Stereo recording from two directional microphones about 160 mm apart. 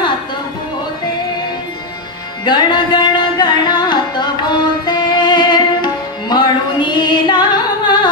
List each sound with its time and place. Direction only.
2.4 s music: 30° left (ahead or behind)